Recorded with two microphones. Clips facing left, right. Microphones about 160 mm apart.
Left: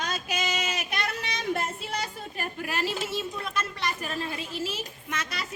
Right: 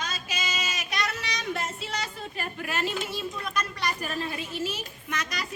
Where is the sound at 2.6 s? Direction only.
35° left (ahead or behind).